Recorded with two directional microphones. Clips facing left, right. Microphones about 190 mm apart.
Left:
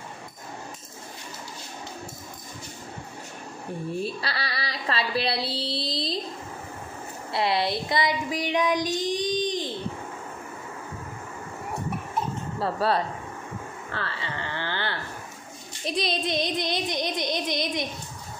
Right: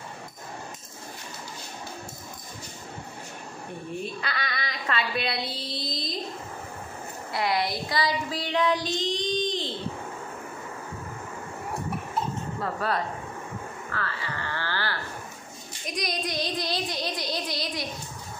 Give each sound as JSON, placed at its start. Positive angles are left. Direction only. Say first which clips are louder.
{"t": 4.0, "sound": "a woman's voice", "louder": "left 2 dB", "side_deg": 35}
{"t": 7.3, "sound": "child singing", "louder": "left 2 dB", "side_deg": 25}
{"t": 12.5, "sound": "speech", "louder": "left 5 dB", "side_deg": 30}
{"t": 13.9, "sound": "music", "louder": "left 1 dB", "side_deg": 25}